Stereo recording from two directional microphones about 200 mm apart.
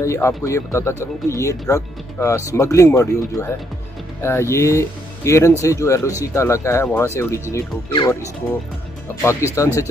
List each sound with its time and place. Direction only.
0.0 s speech: 15° left (ahead or behind)
9.2 s speech: 15° left (ahead or behind)